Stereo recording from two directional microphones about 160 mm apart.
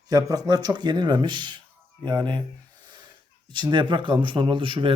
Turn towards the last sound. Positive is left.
turn(degrees=-30)  # may be behind; listen again after turning